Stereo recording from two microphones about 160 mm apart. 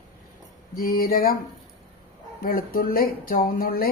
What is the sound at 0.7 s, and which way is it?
Speech, 65° left (ahead or behind).